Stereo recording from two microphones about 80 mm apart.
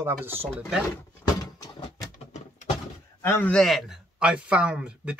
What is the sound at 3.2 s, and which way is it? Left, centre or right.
Speech, left.